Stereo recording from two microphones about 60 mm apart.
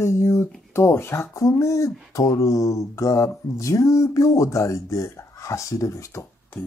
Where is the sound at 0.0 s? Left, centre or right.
Left.